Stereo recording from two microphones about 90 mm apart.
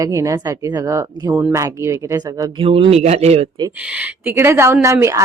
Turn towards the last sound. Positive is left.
turn(degrees=-35)  # may be behind; listen again after turning